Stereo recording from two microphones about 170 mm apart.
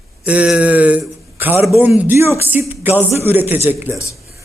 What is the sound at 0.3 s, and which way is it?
Speech, 5° right (ahead or behind).